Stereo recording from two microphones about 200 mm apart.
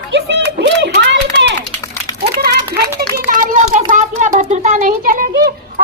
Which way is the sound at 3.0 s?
45° right (ahead or behind).